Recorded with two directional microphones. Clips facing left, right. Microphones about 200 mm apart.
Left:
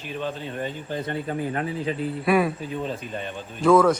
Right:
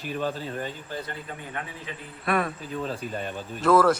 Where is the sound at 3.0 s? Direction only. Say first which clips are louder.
Even; 45° right (ahead or behind).